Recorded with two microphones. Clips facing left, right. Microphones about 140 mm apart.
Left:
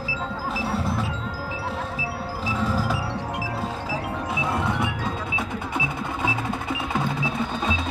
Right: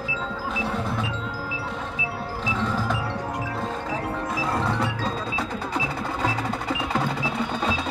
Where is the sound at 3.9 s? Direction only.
Centre (ahead or behind).